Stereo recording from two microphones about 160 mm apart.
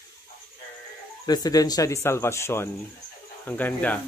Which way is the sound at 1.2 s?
25° left (ahead or behind).